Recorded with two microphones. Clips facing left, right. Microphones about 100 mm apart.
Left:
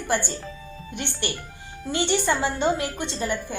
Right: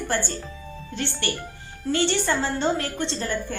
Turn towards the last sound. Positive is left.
turn(degrees=15)  # may be behind; listen again after turning